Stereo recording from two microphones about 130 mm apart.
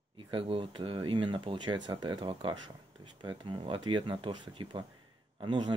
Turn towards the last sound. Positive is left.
turn(degrees=-35)  # may be behind; listen again after turning